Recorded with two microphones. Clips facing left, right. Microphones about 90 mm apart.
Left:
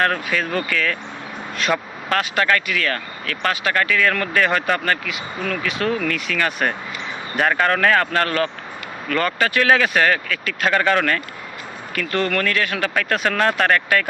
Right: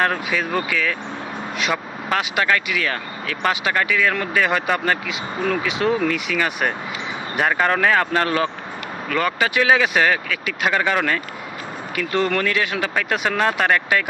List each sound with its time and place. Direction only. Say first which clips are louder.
0.0 s speech: even; 10° right (ahead or behind)
5.0 s speech: right 3 dB; 25° right (ahead or behind)